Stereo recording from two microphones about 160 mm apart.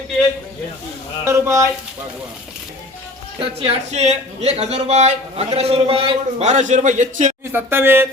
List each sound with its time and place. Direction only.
1.2 s speech: 20° right (ahead or behind)
3.4 s a man's voice: 35° right (ahead or behind)
7.5 s speech: 15° right (ahead or behind)